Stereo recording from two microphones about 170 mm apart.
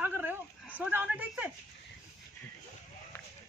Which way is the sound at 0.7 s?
10° right (ahead or behind).